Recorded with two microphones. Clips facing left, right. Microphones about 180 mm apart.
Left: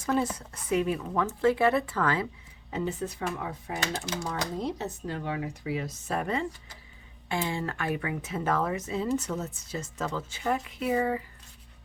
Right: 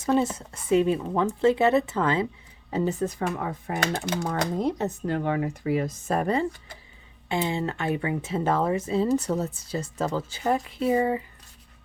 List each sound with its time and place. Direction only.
0.0 s speech: 25° right (ahead or behind)
2.6 s speech: 40° right (ahead or behind)
7.3 s speech: 20° right (ahead or behind)